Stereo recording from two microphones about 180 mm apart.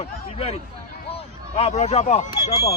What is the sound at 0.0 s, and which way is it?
Speech, 35° left (ahead or behind).